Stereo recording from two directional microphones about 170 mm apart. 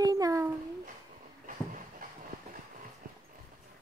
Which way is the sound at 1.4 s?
50° right (ahead or behind).